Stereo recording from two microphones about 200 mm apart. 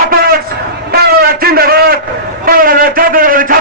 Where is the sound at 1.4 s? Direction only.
50° right (ahead or behind).